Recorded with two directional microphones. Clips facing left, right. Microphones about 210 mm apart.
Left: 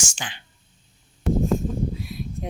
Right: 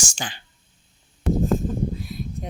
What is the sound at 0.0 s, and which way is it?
Speech, 35° right (ahead or behind).